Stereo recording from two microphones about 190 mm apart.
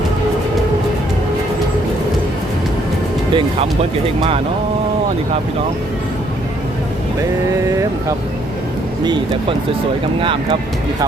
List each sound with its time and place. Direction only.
3.3 s speech: 30° right (ahead or behind)
9.0 s speech: 25° right (ahead or behind)